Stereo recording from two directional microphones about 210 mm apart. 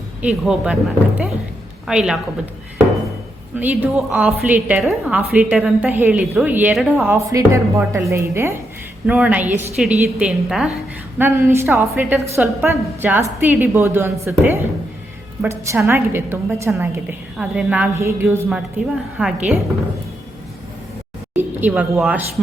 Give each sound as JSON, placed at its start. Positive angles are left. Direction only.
{"t": 0.2, "sound": "a woman's voice", "side_deg": -5}
{"t": 3.6, "sound": "a woman's voice", "side_deg": -10}
{"t": 7.1, "sound": "a woman's voice", "side_deg": -15}
{"t": 21.3, "sound": "speech", "side_deg": -5}